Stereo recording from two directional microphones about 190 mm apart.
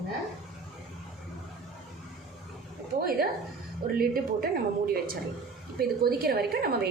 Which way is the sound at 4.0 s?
50° right (ahead or behind).